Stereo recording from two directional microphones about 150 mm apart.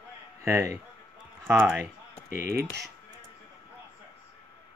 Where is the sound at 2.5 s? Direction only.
90° right.